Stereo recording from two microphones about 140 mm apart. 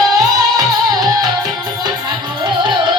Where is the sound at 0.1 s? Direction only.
25° right (ahead or behind).